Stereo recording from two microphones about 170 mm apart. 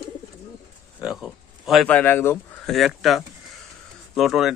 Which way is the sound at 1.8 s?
10° left (ahead or behind).